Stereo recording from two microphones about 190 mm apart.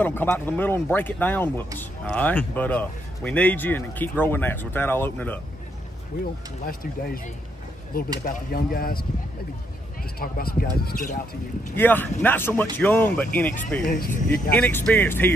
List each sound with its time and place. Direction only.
0.0 s speech: 10° left (ahead or behind)
6.6 s speech: 50° left (ahead or behind)
10.1 s speech: 50° left (ahead or behind)
11.7 s speech: 10° left (ahead or behind)
13.8 s speech: 50° left (ahead or behind)
14.5 s speech: 10° left (ahead or behind)